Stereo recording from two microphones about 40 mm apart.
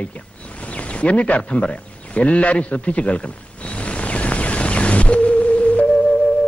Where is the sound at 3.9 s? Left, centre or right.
Left.